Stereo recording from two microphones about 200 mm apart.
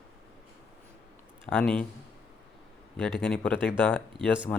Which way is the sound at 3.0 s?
Centre (ahead or behind).